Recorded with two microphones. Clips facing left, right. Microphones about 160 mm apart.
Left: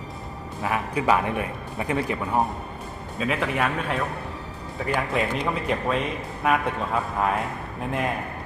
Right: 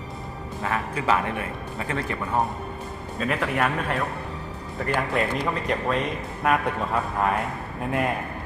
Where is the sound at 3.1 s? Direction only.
Centre (ahead or behind).